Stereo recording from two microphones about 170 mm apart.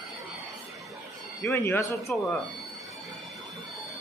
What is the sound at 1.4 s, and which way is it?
Speech, 15° left (ahead or behind).